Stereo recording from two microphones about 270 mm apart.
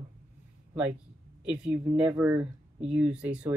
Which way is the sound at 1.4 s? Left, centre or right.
Centre.